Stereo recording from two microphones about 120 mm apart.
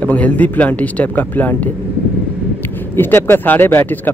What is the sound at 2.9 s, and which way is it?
Speech, 15° left (ahead or behind).